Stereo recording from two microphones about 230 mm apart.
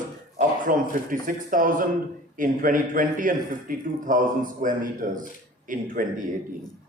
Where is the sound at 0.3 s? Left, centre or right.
Right.